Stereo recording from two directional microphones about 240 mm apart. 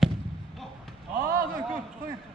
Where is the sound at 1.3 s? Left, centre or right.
Right.